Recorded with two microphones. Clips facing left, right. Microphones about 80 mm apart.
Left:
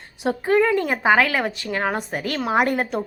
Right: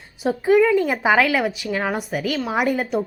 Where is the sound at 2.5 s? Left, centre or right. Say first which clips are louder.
Left 3 dB; left.